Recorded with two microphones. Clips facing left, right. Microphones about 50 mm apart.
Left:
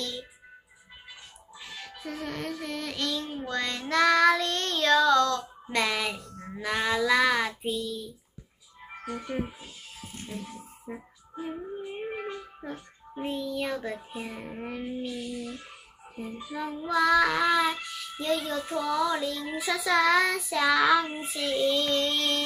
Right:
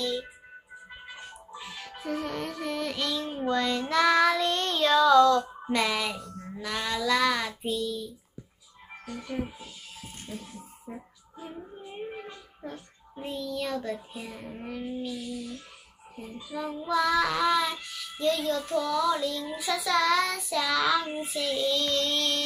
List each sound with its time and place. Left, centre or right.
0.0 s music: centre
1.6 s music: centre
3.9 s child singing: centre
9.0 s child singing: left
10.0 s music: centre
11.8 s dog: left
13.4 s child singing: centre
14.5 s a sound: left
16.4 s child singing: centre